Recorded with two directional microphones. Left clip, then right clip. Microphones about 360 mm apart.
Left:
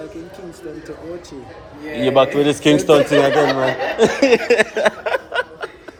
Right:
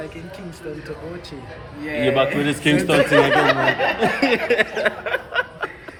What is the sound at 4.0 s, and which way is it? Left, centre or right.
Speech, centre.